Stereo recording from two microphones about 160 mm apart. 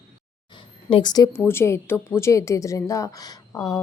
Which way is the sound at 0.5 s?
30° left (ahead or behind).